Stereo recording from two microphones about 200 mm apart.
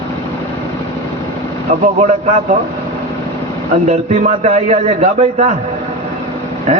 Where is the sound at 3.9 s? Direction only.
35° right (ahead or behind).